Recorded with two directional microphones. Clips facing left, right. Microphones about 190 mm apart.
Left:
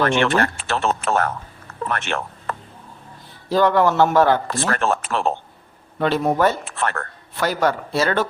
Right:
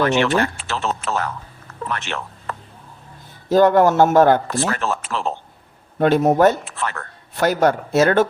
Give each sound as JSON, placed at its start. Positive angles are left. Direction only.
{"t": 0.0, "sound": "speech", "side_deg": 55}
{"t": 1.9, "sound": "a sound", "side_deg": 55}
{"t": 3.5, "sound": "speech", "side_deg": -45}
{"t": 4.7, "sound": "speech", "side_deg": 55}
{"t": 6.0, "sound": "speech", "side_deg": -45}
{"t": 6.7, "sound": "speech", "side_deg": 55}
{"t": 7.3, "sound": "speech", "side_deg": -45}